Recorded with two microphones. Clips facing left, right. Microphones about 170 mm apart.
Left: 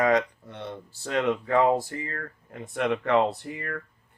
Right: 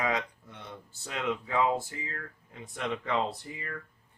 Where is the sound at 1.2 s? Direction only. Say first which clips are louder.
Left 5 dB; 50° left (ahead or behind).